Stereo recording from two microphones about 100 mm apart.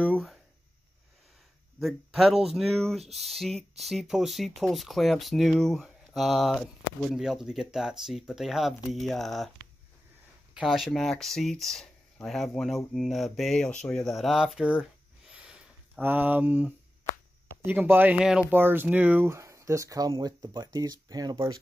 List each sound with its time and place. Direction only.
1.8 s speech: centre (ahead or behind)
10.5 s speech: 5° right (ahead or behind)
15.3 s a sound: 10° right (ahead or behind)
16.0 s speech: 20° right (ahead or behind); by 21.4 s 40° right (ahead or behind)